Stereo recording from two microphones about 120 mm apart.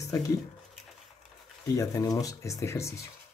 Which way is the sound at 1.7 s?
25° left (ahead or behind).